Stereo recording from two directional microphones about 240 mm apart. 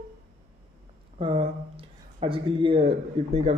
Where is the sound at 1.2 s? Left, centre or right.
Right.